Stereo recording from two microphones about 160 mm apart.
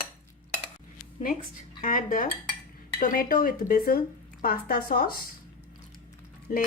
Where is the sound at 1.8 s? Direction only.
55° left (ahead or behind).